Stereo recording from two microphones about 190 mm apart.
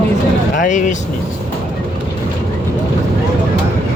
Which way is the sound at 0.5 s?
40° left (ahead or behind).